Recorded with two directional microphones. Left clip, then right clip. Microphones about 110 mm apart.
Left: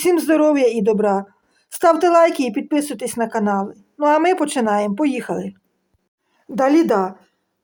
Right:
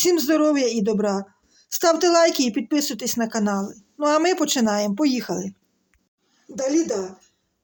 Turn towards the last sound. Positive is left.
turn(degrees=-30)  # may be behind; listen again after turning